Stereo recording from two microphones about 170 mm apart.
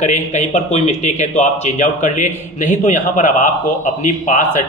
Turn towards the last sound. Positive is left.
turn(degrees=50)  # may be behind; listen again after turning